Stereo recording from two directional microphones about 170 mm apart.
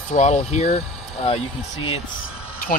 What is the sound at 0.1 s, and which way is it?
Speech, 40° left (ahead or behind).